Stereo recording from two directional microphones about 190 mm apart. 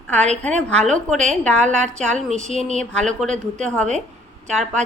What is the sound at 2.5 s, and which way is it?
Speech, 30° left (ahead or behind).